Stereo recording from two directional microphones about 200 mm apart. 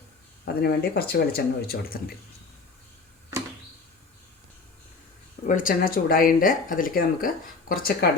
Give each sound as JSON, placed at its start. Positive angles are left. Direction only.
{"t": 0.4, "sound": "speech", "side_deg": 50}
{"t": 5.5, "sound": "speech", "side_deg": 45}